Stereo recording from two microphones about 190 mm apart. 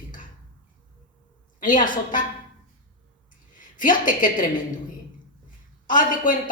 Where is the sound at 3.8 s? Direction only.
45° left (ahead or behind).